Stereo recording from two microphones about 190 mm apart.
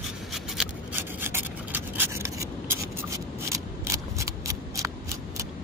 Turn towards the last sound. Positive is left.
turn(degrees=-15)  # may be behind; listen again after turning